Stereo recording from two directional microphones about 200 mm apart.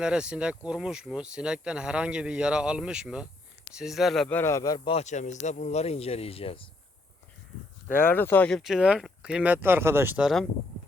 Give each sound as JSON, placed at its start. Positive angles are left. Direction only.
{"t": 0.0, "sound": "speech", "side_deg": -5}
{"t": 4.9, "sound": "speech", "side_deg": 35}
{"t": 8.1, "sound": "speech", "side_deg": 10}